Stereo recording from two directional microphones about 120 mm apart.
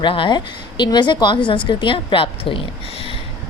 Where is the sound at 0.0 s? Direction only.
45° left (ahead or behind).